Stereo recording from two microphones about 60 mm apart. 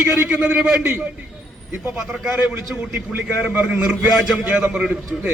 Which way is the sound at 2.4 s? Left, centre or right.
Right.